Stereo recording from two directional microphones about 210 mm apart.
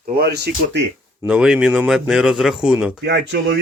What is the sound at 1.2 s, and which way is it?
A man's voice, 5° right (ahead or behind).